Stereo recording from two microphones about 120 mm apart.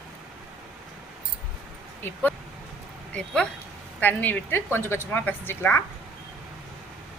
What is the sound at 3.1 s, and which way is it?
Speech, 10° left (ahead or behind).